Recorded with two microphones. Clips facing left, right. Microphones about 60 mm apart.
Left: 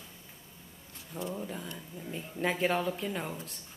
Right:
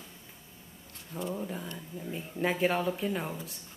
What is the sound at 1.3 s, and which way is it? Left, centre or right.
Speech, centre.